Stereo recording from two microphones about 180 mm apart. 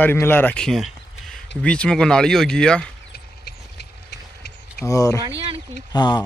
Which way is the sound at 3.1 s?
60° left (ahead or behind).